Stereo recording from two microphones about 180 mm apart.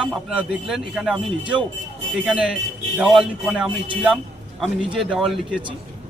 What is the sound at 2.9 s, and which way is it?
A man's voice, 5° right (ahead or behind).